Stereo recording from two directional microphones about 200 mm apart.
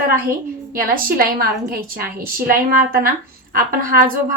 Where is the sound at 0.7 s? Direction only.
45° right (ahead or behind).